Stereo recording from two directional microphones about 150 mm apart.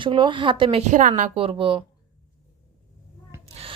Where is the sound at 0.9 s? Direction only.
60° right (ahead or behind).